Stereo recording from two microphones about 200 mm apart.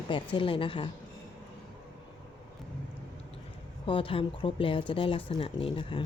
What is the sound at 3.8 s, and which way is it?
Speech, 25° left (ahead or behind).